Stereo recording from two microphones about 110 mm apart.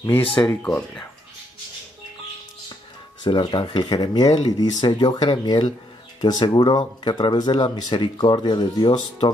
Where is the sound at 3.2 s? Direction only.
45° left (ahead or behind).